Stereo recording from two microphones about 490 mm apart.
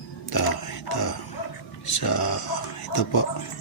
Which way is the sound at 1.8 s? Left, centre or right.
Left.